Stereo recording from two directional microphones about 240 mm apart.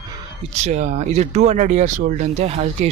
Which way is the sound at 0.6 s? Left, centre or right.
Right.